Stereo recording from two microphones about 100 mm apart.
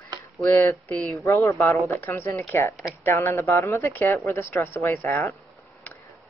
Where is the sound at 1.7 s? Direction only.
20° left (ahead or behind).